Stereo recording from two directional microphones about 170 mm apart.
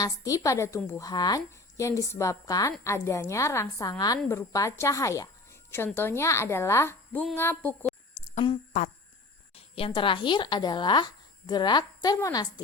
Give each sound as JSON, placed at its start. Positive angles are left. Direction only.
{"t": 0.0, "sound": "a woman's voice", "side_deg": 20}
{"t": 8.2, "sound": "a sound", "side_deg": 30}
{"t": 9.6, "sound": "speech", "side_deg": 35}